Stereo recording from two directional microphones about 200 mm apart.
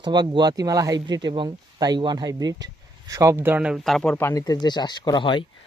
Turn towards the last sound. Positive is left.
turn(degrees=25)  # may be behind; listen again after turning